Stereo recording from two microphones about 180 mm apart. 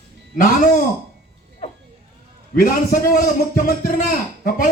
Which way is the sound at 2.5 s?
50° left (ahead or behind).